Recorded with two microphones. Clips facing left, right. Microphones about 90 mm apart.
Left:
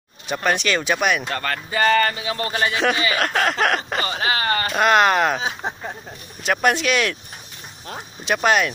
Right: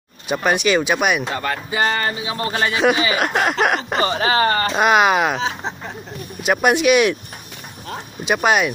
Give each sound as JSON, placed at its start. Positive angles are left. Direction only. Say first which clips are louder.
{"t": 0.3, "sound": "speech", "louder": "right 4 dB", "side_deg": -10}
{"t": 2.7, "sound": "speech", "louder": "right 3 dB", "side_deg": -20}
{"t": 3.6, "sound": "a sound", "louder": "right 2 dB", "side_deg": -15}
{"t": 4.0, "sound": "speech", "louder": "right 6 dB", "side_deg": -30}
{"t": 4.7, "sound": "speech", "louder": "even", "side_deg": -10}
{"t": 6.4, "sound": "speech", "louder": "right 4 dB", "side_deg": -10}
{"t": 8.3, "sound": "speech", "louder": "right 2 dB", "side_deg": -10}